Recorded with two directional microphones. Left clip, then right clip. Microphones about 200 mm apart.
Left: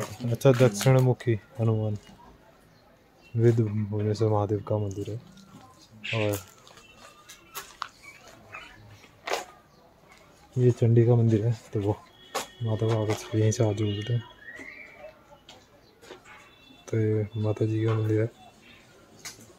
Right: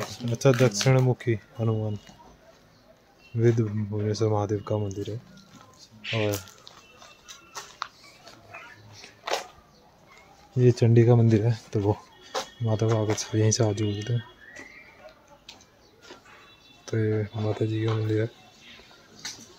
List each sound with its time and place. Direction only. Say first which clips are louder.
0.0 s speech: even; centre (ahead or behind)
3.3 s speech: even; centre (ahead or behind)
6.1 s speech: right 1 dB; 15° right (ahead or behind)
7.8 s a sound: right 1 dB; 5° right (ahead or behind)
9.3 s a sound: right 1 dB; centre (ahead or behind)
10.6 s speech: right 2 dB; 20° right (ahead or behind); by 14.1 s 5° right (ahead or behind)
16.8 s speech: even; 5° right (ahead or behind)